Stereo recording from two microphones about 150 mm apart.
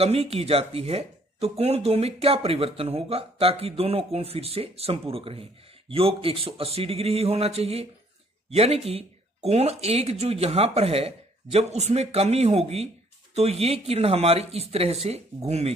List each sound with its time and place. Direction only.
0.0 s speech: 45° right (ahead or behind)